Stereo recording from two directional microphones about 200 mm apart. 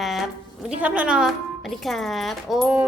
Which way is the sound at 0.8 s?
5° right (ahead or behind).